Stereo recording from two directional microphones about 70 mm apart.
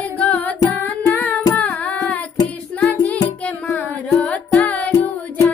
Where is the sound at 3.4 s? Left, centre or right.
Centre.